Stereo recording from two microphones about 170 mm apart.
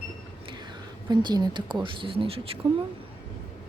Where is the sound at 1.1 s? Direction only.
25° right (ahead or behind).